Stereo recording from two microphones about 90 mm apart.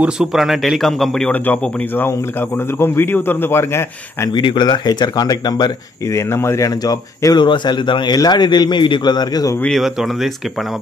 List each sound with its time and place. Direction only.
0.0 s a man's voice: 5° right (ahead or behind)
1.3 s a man's voice: 20° left (ahead or behind)
4.3 s speech: 60° left (ahead or behind)
6.1 s speech: 30° left (ahead or behind)
7.3 s a man's voice: 60° left (ahead or behind)